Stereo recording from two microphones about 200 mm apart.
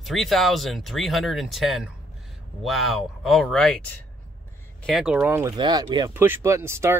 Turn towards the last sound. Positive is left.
turn(degrees=-15)  # may be behind; listen again after turning